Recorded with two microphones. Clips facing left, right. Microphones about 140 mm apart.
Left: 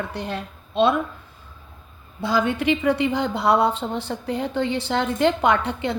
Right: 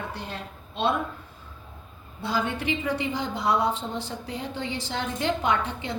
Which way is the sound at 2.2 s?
85° left.